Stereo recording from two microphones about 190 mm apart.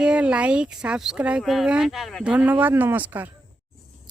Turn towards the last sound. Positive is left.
turn(degrees=-10)  # may be behind; listen again after turning